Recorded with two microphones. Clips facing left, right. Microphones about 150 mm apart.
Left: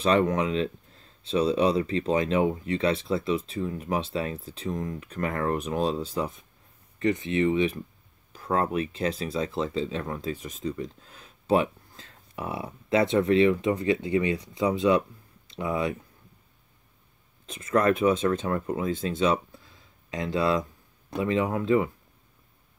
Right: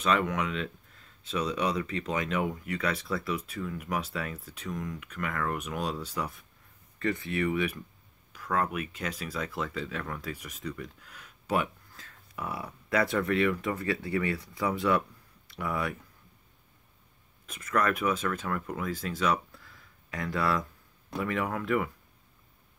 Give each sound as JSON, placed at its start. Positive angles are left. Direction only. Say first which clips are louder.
{"t": 0.0, "sound": "speech", "louder": "left 5 dB", "side_deg": 35}
{"t": 17.5, "sound": "speech", "louder": "left 5 dB", "side_deg": 30}